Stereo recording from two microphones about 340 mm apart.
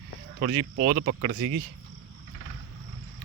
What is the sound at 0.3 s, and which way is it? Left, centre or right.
Speech, right.